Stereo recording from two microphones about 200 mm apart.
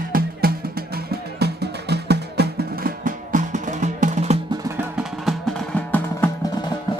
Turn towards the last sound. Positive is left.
turn(degrees=5)  # may be behind; listen again after turning